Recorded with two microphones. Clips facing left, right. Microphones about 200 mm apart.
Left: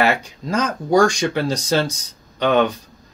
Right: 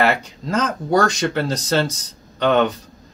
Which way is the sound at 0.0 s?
Centre (ahead or behind).